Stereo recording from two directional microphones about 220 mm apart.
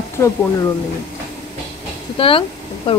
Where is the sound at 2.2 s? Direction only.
25° left (ahead or behind).